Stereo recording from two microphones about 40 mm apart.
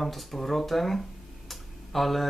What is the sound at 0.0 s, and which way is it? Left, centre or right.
Speech, centre.